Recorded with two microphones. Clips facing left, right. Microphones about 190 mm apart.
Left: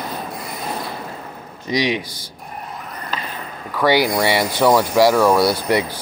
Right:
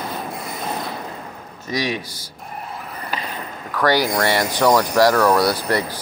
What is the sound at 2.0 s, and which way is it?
Speech, 10° right (ahead or behind).